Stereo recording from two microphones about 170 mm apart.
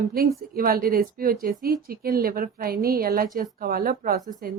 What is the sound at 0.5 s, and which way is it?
Speech, 60° right (ahead or behind).